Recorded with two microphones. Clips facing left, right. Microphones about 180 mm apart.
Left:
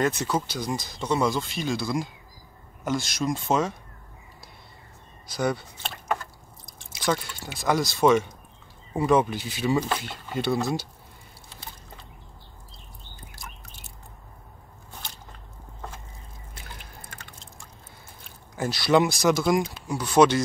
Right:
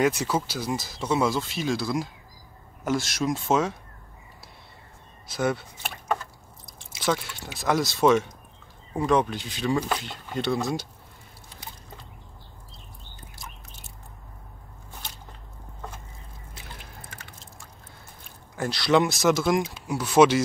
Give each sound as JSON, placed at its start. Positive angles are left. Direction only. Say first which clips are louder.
{"t": 0.0, "sound": "speech", "louder": "right 1 dB", "side_deg": -10}
{"t": 5.3, "sound": "speech", "louder": "even", "side_deg": 0}
{"t": 7.0, "sound": "speech", "louder": "even", "side_deg": 0}
{"t": 18.6, "sound": "speech", "louder": "left 1 dB", "side_deg": 5}